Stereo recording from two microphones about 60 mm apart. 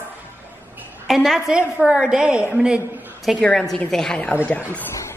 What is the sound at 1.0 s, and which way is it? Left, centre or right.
Speech, centre.